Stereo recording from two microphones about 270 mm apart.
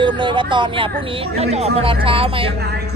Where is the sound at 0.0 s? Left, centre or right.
Centre.